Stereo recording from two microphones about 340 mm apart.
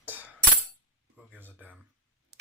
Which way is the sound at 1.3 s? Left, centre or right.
Centre.